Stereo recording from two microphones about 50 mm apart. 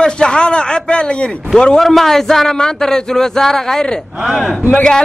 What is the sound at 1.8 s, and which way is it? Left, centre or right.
A man's voice, centre.